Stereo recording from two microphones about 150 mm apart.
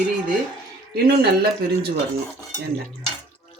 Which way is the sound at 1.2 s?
90° right.